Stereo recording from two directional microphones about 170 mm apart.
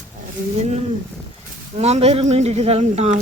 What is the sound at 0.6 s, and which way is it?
Speech, 40° right (ahead or behind).